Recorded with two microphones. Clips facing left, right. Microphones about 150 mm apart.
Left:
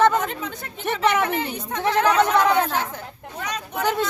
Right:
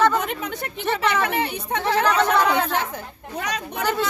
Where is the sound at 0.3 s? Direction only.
70° right (ahead or behind).